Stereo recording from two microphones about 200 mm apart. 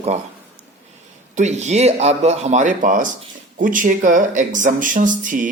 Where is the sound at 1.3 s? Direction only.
35° right (ahead or behind).